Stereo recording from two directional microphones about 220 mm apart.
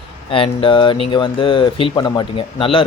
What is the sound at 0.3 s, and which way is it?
Speech, 25° left (ahead or behind).